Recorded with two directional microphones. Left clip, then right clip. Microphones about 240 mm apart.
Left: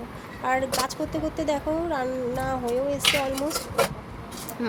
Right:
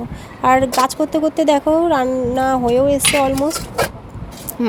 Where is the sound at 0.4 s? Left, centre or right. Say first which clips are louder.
Right 12 dB; right.